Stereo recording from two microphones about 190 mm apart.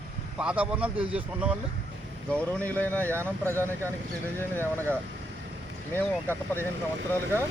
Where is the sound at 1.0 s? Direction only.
30° right (ahead or behind).